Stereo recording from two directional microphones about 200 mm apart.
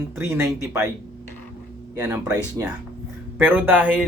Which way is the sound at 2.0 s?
15° right (ahead or behind).